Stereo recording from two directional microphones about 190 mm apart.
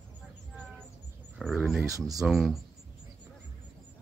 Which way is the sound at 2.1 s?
Centre (ahead or behind).